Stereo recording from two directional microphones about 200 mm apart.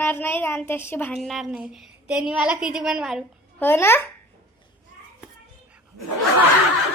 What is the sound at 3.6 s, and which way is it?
Speech, 10° left (ahead or behind).